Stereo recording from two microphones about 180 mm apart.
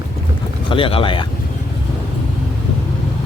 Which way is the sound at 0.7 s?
30° left (ahead or behind).